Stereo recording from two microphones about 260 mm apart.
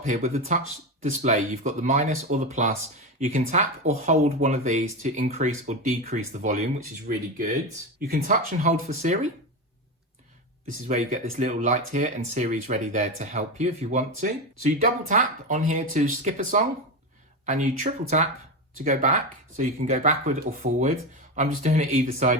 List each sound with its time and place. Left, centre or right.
0.0 s speech: right
7.9 s speech: right
10.8 s speech: right